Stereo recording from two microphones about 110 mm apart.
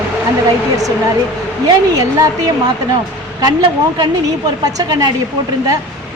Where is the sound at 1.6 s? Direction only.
35° right (ahead or behind).